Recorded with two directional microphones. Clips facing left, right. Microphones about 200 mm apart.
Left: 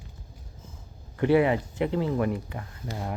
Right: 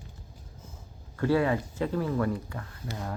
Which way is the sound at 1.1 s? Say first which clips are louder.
Left 4 dB; 20° left (ahead or behind).